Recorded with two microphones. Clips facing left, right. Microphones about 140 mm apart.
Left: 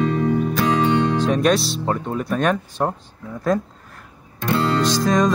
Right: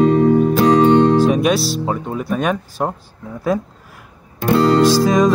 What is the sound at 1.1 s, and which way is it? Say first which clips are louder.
Music: right 4 dB; 5° right (ahead or behind).